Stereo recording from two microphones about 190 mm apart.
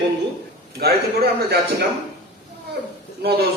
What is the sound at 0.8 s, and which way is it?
Speech, 55° right (ahead or behind).